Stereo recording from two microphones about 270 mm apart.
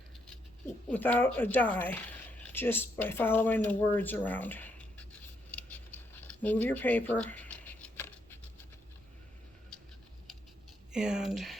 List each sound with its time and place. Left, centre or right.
0.9 s speech: centre
5.5 s scissors: centre
10.9 s speech: centre